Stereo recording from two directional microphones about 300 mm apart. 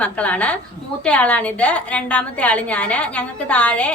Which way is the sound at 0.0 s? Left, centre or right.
Centre.